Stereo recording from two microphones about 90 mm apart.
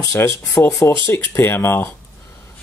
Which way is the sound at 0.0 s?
30° left (ahead or behind).